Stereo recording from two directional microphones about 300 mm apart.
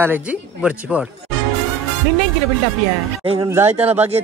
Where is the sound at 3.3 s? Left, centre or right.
Centre.